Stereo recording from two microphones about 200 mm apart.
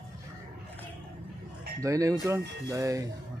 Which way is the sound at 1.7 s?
15° right (ahead or behind).